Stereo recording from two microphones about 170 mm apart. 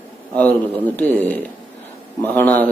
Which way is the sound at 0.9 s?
10° left (ahead or behind).